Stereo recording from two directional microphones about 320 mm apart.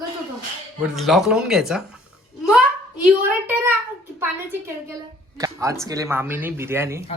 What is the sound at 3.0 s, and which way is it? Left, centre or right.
Speech, centre.